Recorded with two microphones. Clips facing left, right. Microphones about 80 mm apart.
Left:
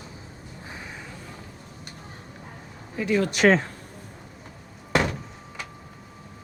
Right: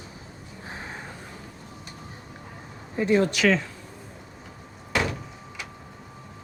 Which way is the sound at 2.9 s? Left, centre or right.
Right.